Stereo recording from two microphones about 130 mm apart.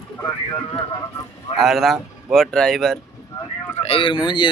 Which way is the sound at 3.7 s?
50° left (ahead or behind).